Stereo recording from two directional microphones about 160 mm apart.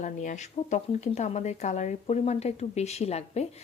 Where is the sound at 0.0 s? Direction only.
50° left (ahead or behind).